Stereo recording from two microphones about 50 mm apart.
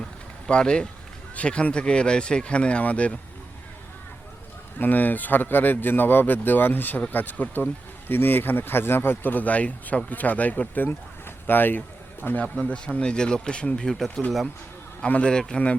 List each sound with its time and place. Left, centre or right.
0.4 s speech: centre
4.8 s speech: left
12.5 s speech: left
15.0 s speech: left